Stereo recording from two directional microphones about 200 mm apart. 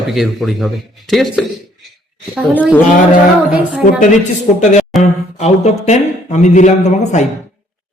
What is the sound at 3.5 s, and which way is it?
Speech, 5° right (ahead or behind).